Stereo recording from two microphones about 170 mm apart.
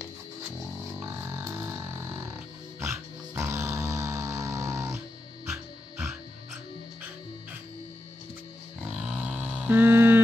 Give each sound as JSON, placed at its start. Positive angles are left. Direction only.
{"t": 0.9, "sound": "music", "side_deg": -10}
{"t": 8.9, "sound": "grunt", "side_deg": -5}